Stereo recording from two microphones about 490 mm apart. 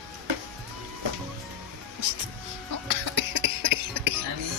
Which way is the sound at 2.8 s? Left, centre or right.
Right.